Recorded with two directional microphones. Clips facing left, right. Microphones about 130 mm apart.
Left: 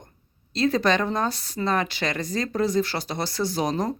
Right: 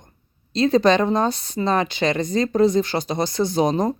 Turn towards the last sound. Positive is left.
turn(degrees=-25)  # may be behind; listen again after turning